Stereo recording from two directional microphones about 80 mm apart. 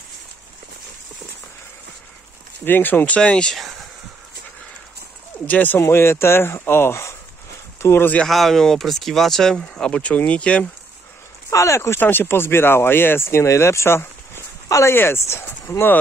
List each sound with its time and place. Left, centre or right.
2.6 s speech: left
3.2 s speech: centre
5.5 s speech: left
8.3 s speech: centre
11.5 s speech: left
12.0 s speech: left